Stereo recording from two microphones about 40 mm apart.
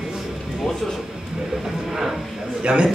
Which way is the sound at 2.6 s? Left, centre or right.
Right.